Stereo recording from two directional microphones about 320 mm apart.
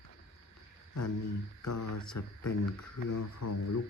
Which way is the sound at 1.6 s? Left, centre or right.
Left.